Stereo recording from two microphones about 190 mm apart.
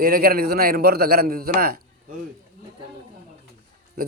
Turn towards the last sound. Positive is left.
turn(degrees=-50)  # may be behind; listen again after turning